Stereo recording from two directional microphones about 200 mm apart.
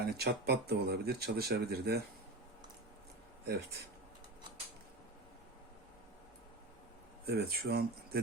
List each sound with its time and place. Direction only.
0.0 s speech: 55° right (ahead or behind)
3.4 s speech: 55° right (ahead or behind)
7.3 s speech: 50° right (ahead or behind)